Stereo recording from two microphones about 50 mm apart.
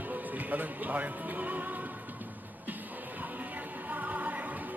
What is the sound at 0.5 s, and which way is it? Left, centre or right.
Speech, right.